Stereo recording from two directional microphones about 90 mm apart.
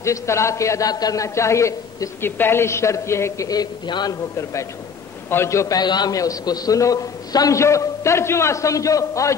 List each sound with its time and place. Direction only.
0.0 s a man's voice: 35° left (ahead or behind)
3.4 s a man's voice: 50° left (ahead or behind)
4.1 s a man's voice: 35° left (ahead or behind)
5.8 s a man's voice: 50° left (ahead or behind)